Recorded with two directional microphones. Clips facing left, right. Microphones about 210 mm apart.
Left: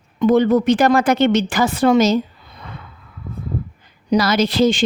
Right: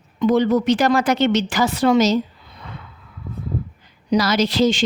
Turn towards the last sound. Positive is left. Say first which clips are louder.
# left 2 dB
turn(degrees=55)  # may be behind; listen again after turning